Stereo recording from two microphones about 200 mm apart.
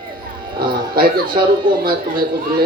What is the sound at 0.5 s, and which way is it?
Speech, 45° right (ahead or behind).